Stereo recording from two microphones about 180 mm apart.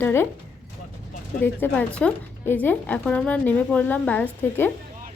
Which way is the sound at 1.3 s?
10° left (ahead or behind).